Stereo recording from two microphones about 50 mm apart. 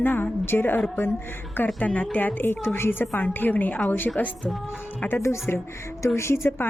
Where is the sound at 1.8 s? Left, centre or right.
Left.